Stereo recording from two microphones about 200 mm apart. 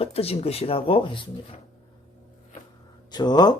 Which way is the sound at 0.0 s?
30° left (ahead or behind).